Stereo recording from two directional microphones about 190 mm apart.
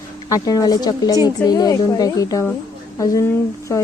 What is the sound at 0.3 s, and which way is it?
Speech, 20° left (ahead or behind).